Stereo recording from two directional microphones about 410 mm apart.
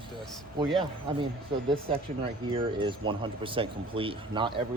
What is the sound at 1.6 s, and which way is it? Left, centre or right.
Speech, centre.